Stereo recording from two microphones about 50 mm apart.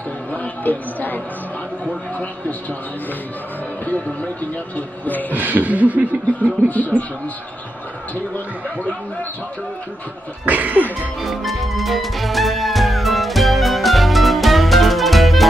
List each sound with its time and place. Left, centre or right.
0.3 s speech: left
4.7 s a sound: left
5.3 s speech: right
6.4 s a sound: left
10.4 s speech: right
11.2 s music: centre